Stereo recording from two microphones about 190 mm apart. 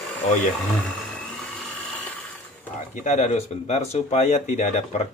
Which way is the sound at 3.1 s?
40° left (ahead or behind).